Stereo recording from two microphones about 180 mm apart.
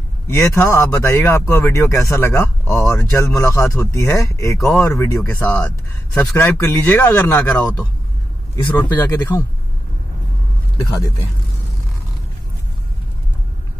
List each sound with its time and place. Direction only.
0.3 s speech: 15° left (ahead or behind)
8.9 s speech: 10° left (ahead or behind)